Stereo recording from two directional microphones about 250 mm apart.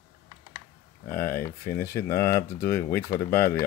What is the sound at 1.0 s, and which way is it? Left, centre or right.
Speech, left.